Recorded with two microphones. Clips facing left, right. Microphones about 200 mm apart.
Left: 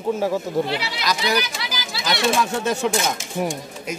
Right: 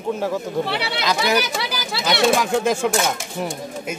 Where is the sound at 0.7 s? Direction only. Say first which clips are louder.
Right 2 dB; 60° right (ahead or behind).